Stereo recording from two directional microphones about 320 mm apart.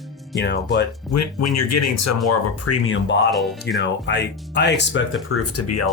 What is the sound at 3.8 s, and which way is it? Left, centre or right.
Speech, left.